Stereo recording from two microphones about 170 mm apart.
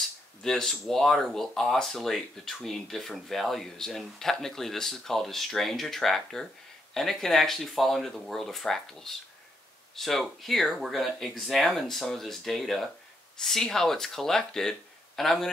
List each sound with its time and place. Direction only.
0.4 s speech: 5° left (ahead or behind)